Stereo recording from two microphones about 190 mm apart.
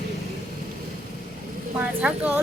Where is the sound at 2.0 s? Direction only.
5° right (ahead or behind).